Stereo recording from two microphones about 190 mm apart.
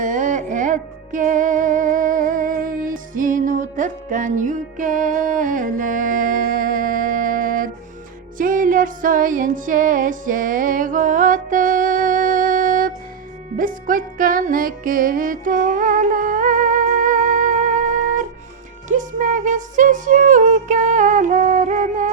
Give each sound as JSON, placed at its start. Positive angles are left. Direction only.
{"t": 0.0, "sound": "music", "side_deg": -40}